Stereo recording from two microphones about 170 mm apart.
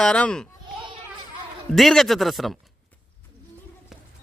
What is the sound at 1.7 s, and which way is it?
Speech, centre (ahead or behind).